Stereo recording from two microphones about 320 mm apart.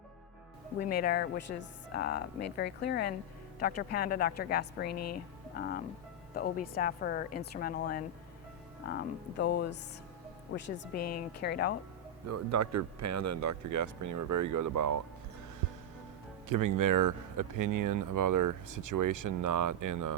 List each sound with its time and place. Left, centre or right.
0.8 s speech: left
4.9 s speech: left
5.1 s speech: left
9.4 s speech: left
12.3 s speech: right
16.5 s speech: right